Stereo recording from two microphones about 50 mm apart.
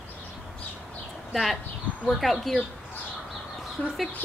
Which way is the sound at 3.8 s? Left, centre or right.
Left.